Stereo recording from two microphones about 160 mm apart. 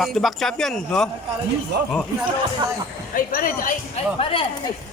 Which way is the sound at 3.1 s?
60° left (ahead or behind).